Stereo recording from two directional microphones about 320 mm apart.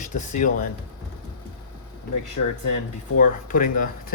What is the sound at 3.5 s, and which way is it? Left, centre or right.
Speech, left.